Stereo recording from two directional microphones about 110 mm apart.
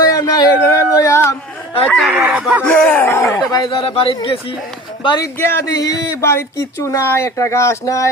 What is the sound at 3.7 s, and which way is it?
Speech, 55° left (ahead or behind).